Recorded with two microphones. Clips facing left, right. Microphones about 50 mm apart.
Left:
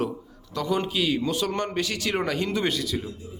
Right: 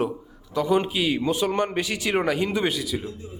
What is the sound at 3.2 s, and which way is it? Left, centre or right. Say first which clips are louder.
Speech: right 2 dB; right.